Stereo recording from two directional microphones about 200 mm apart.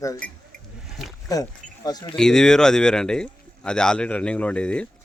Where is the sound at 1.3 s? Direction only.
20° left (ahead or behind).